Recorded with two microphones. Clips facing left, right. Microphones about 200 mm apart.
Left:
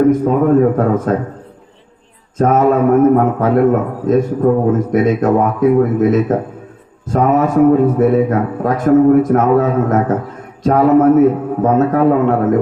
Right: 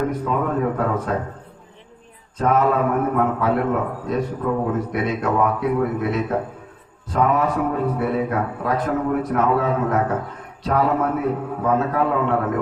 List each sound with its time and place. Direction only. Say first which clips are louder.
0.1 s a man's voice: left 11 dB; 45° left (ahead or behind)
2.4 s a man's voice: left 7 dB; 45° left (ahead or behind)